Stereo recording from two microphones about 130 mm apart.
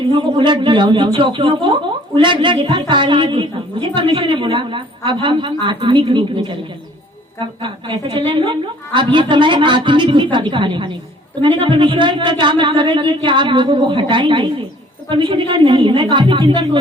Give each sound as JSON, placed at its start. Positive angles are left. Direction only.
{"t": 0.1, "sound": "a man's voice", "side_deg": -45}